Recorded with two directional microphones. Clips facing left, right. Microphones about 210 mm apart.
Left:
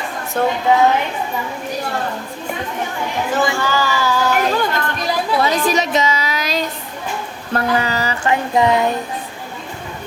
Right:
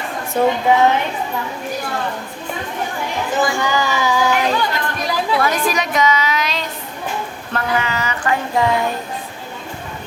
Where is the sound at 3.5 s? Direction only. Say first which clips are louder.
Even; 15° right (ahead or behind).